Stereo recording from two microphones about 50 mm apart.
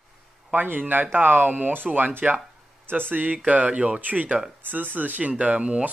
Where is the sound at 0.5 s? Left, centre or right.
Right.